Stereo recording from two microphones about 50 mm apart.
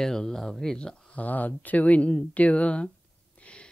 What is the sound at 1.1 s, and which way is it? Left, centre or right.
Speech, left.